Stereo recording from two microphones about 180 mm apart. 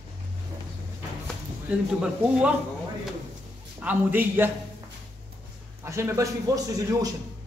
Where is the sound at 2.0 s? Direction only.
5° right (ahead or behind).